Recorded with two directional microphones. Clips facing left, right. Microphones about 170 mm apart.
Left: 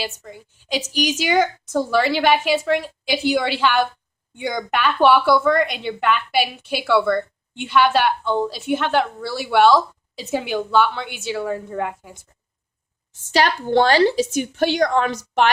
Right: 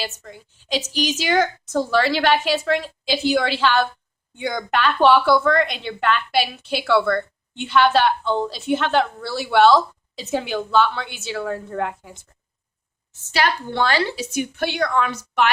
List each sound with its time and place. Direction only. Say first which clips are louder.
0.0 s a woman's voice: left 1 dB; 10° left (ahead or behind)
13.3 s a woman's voice: left 5 dB; 40° left (ahead or behind)